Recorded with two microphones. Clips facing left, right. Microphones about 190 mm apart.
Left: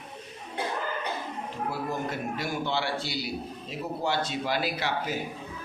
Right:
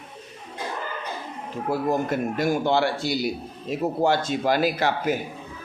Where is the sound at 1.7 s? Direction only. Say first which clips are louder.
Right 11 dB; 45° right (ahead or behind).